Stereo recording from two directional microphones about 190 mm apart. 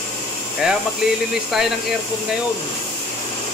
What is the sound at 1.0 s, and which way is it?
Speech, 5° right (ahead or behind).